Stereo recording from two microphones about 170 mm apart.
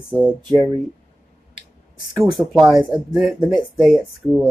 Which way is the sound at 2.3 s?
Centre (ahead or behind).